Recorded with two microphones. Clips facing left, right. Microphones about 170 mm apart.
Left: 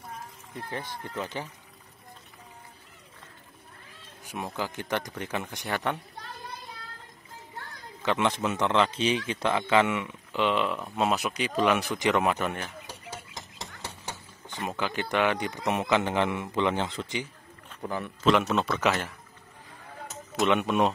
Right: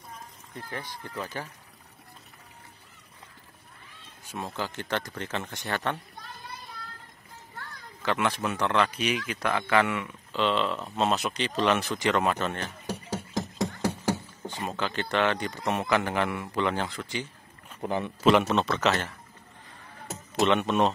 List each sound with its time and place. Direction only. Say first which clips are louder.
1.0 s speech: left 1 dB; 20° left (ahead or behind)
4.3 s a man's voice: left 1 dB; 15° left (ahead or behind)
8.0 s a man's voice: left 1 dB; 20° left (ahead or behind)
13.3 s music: right 14 dB; 50° right (ahead or behind)
14.6 s a man's voice: left 1 dB; 15° left (ahead or behind)
17.8 s speech: right 3 dB; 20° right (ahead or behind)
18.2 s a man's voice: right 1 dB; centre (ahead or behind)
20.4 s a man's voice: even; 10° left (ahead or behind)